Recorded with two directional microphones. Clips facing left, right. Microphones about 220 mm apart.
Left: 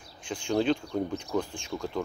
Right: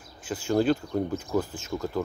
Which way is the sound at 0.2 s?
5° right (ahead or behind).